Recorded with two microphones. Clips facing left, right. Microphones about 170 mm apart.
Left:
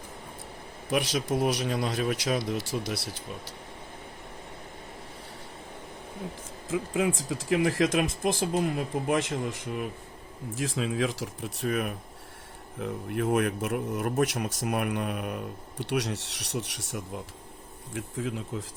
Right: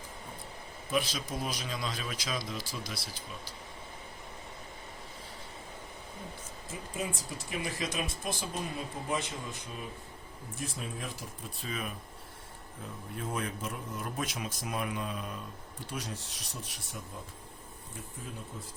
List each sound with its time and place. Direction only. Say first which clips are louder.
0.9 s speech: left 6 dB; 75° left (ahead or behind)
6.7 s speech: left 11 dB; 90° left; by 9.9 s 75° left (ahead or behind)
10.5 s speech: left 10 dB; 90° left
17.9 s speech: left 12 dB; 90° left